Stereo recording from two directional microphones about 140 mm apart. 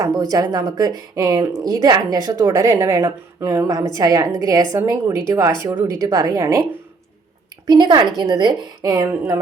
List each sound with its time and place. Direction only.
0.0 s speech: 25° right (ahead or behind)
7.7 s speech: 30° right (ahead or behind)